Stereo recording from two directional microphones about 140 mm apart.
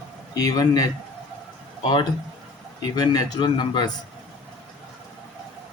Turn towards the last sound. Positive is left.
turn(degrees=30)  # may be behind; listen again after turning